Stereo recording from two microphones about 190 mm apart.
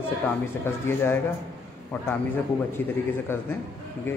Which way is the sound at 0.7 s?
10° left (ahead or behind).